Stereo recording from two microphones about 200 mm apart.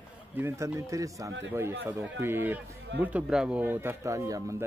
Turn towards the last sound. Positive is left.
turn(degrees=-15)  # may be behind; listen again after turning